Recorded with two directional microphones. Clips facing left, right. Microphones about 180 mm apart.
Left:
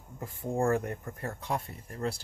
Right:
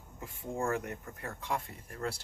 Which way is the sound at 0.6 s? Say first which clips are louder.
Left 6 dB; 50° left (ahead or behind).